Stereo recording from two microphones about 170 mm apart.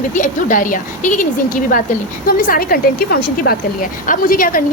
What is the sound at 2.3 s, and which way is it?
A woman's voice, 55° left (ahead or behind).